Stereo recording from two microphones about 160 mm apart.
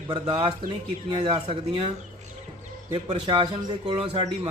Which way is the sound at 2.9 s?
35° right (ahead or behind).